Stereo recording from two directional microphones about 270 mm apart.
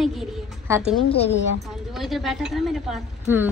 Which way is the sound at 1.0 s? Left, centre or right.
Left.